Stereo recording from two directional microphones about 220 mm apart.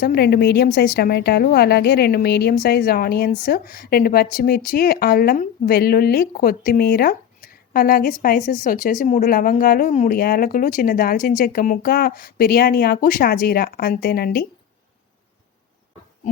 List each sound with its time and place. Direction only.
0.0 s a woman's voice: 45° left (ahead or behind)